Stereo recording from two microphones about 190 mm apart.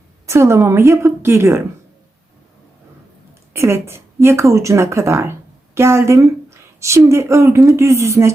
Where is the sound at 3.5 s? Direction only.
15° right (ahead or behind).